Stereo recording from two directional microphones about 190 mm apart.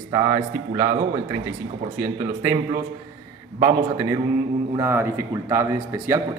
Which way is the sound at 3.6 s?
20° right (ahead or behind).